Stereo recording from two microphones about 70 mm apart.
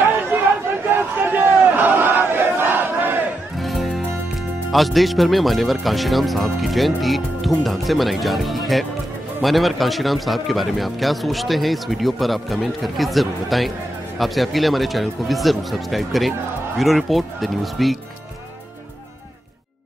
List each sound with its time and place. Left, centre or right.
0.3 s chatter: right
0.9 s battle cry: right
3.5 s music: centre
4.6 s a man's voice: centre